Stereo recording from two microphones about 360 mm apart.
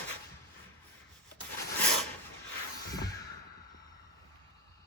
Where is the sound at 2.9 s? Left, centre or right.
Centre.